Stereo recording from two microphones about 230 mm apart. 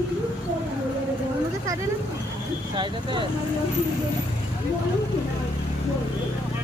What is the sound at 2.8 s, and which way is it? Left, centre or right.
Speech, right.